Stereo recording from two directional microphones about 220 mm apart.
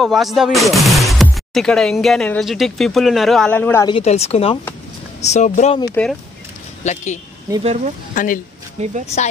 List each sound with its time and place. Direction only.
0.0 s speech: centre (ahead or behind)
3.8 s speech: 25° left (ahead or behind)
6.8 s speech: 35° left (ahead or behind)
7.6 s speech: 30° right (ahead or behind)
8.1 s speech: 35° left (ahead or behind)
8.8 s speech: 30° right (ahead or behind)